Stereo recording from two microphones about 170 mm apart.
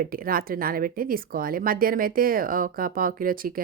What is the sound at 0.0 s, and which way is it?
Speech, 55° right (ahead or behind).